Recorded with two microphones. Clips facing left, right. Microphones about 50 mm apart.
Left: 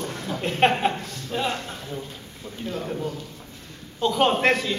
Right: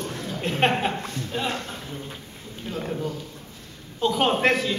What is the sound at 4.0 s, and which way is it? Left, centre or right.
Speech, centre.